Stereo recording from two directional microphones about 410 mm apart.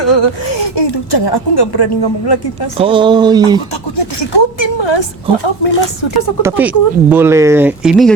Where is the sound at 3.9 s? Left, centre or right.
Left.